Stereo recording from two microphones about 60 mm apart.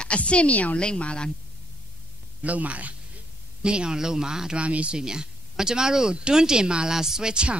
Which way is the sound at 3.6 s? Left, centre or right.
Centre.